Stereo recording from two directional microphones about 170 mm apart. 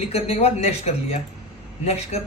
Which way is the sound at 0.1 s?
35° left (ahead or behind).